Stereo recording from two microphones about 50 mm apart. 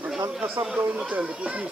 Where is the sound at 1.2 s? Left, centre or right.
Right.